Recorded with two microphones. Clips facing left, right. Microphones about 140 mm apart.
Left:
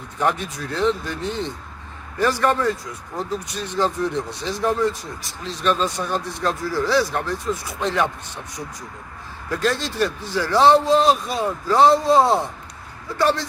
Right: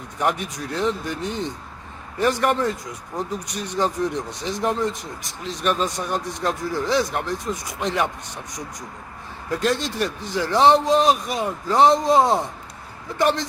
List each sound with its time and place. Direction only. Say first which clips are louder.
0.2 s speech: left 1 dB; 15° right (ahead or behind)
9.6 s speech: left 1 dB; 15° right (ahead or behind)